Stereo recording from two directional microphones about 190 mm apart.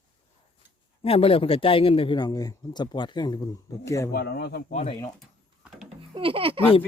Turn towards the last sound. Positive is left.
turn(degrees=-30)  # may be behind; listen again after turning